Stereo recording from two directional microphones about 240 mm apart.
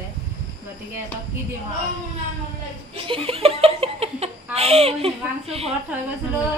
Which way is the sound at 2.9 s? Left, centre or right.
Right.